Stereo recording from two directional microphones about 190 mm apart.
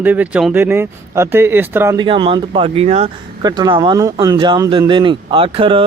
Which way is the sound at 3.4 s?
20° right (ahead or behind).